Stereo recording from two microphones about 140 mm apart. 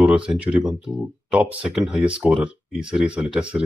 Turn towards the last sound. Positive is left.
turn(degrees=-5)  # may be behind; listen again after turning